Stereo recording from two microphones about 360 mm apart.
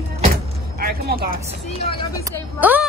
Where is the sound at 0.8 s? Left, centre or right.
Right.